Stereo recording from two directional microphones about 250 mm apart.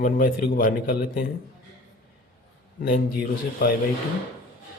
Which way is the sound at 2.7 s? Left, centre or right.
Left.